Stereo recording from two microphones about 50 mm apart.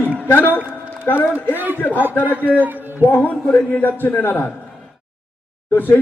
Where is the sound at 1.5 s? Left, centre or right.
Right.